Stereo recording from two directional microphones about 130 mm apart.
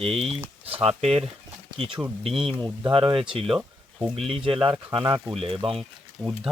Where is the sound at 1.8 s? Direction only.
40° right (ahead or behind).